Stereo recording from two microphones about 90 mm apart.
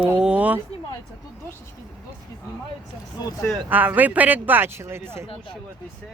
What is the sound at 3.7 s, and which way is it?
Speech, 20° right (ahead or behind).